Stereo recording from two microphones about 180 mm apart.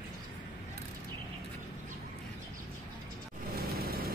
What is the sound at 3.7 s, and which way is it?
Vehicle, 55° right (ahead or behind).